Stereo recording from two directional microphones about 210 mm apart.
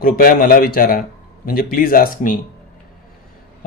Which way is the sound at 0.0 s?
45° left (ahead or behind).